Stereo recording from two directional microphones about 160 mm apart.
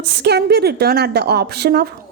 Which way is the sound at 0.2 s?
90° right.